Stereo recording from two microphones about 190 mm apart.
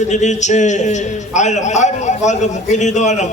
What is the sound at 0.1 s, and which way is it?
A man's voice, 40° left (ahead or behind).